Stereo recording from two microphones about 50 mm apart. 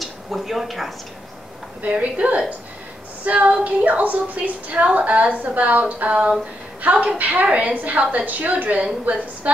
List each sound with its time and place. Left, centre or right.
0.0 s a sound: centre
1.8 s a woman's voice: right
7.4 s a woman's voice: right
7.7 s a woman's voice: right